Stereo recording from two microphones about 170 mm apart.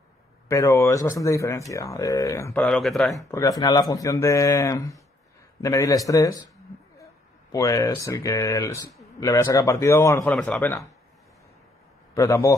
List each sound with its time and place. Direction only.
0.5 s speech: 20° left (ahead or behind)
2.5 s speech: 5° left (ahead or behind)
3.2 s speech: 20° left (ahead or behind)
7.5 s speech: 20° left (ahead or behind)
10.3 s speech: centre (ahead or behind)
12.1 s a man's voice: 20° left (ahead or behind)